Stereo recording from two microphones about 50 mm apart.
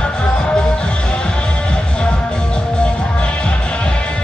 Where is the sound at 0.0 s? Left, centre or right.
Left.